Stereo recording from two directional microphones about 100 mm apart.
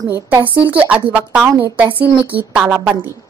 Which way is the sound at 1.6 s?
20° right (ahead or behind).